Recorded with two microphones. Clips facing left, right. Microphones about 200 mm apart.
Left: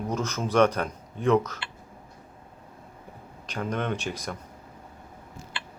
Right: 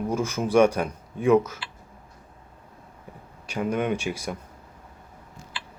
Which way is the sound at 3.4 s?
10° right (ahead or behind).